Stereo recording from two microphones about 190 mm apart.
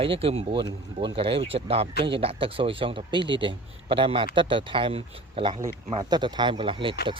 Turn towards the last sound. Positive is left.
turn(degrees=-25)  # may be behind; listen again after turning